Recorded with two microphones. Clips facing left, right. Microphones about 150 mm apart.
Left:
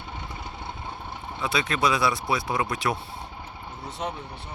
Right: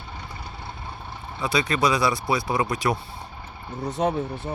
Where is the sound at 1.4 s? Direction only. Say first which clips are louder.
Right 3 dB; centre (ahead or behind).